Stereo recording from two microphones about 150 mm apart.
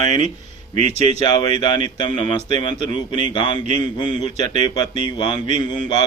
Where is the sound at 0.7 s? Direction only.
45° right (ahead or behind).